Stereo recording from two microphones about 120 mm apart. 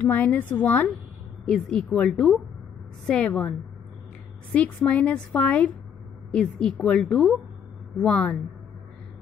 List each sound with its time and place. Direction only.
0.0 s a woman's voice: 15° left (ahead or behind)
4.6 s a woman's voice: 10° left (ahead or behind)